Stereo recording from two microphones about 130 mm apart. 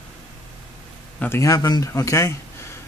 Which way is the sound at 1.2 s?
20° left (ahead or behind).